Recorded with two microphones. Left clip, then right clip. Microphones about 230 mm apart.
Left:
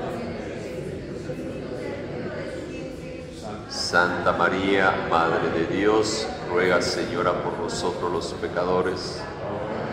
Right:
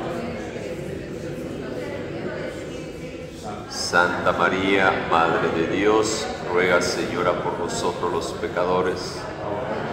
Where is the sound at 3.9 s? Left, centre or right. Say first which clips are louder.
Right 2 dB; centre.